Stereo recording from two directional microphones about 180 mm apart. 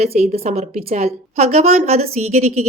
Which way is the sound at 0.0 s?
35° right (ahead or behind).